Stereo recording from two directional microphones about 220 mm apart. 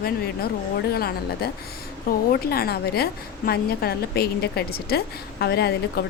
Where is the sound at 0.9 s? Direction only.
45° left (ahead or behind).